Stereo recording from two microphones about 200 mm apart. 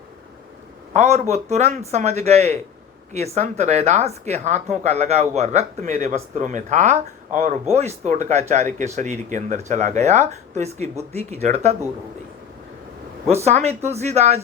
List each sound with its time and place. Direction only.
0.9 s speech: 35° right (ahead or behind)
13.3 s speech: 35° right (ahead or behind)